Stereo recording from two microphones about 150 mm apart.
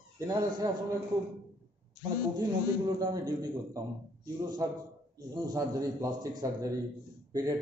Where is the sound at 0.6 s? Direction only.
25° right (ahead or behind).